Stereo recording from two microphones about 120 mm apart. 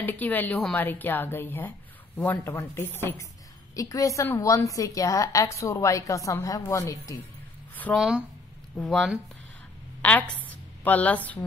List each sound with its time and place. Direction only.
0.0 s a woman's voice: 15° left (ahead or behind)
7.9 s speech: 5° right (ahead or behind)
8.7 s a woman's voice: 5° left (ahead or behind)
10.8 s a woman's voice: 15° left (ahead or behind)